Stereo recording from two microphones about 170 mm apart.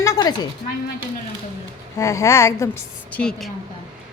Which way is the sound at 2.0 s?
20° left (ahead or behind).